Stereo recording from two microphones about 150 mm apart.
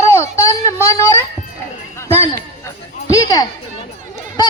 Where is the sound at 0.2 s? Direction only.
20° left (ahead or behind).